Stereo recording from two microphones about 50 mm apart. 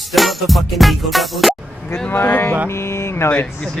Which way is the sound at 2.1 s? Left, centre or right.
Left.